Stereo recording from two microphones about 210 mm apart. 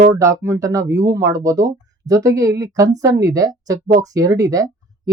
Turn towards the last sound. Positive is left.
turn(degrees=-15)  # may be behind; listen again after turning